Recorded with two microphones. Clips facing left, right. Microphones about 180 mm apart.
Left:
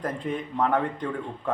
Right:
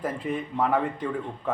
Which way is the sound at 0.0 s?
5° right (ahead or behind).